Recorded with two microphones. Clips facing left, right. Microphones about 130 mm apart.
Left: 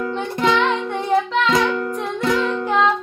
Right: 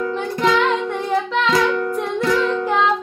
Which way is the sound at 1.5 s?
25° left (ahead or behind).